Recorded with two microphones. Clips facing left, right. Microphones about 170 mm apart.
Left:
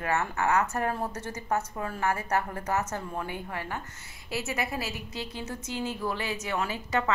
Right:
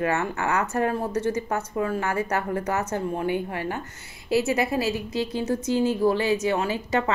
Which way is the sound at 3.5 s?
25° right (ahead or behind).